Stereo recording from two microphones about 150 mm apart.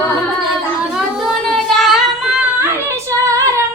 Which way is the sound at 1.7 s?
Centre (ahead or behind).